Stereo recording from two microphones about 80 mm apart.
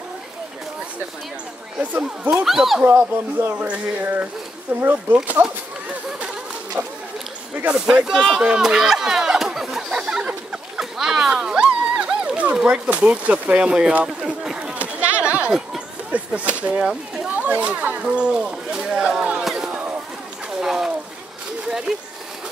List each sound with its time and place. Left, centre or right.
1.8 s speech: right
2.3 s speech: centre
2.8 s speech: right
3.6 s speech: centre
7.7 s speech: centre
8.5 s chatter: centre
16.1 s speech: centre
16.8 s a sound: centre
17.3 s a sound: centre